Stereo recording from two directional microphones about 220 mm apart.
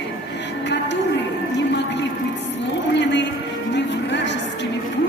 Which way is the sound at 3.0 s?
55° left (ahead or behind).